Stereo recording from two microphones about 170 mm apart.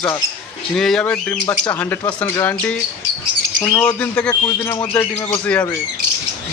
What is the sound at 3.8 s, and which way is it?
A man's voice, 5° left (ahead or behind).